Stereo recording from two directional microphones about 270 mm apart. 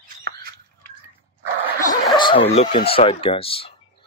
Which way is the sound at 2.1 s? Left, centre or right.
Centre.